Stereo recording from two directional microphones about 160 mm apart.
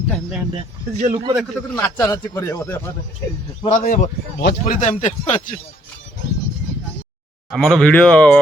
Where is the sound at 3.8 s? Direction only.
60° left (ahead or behind).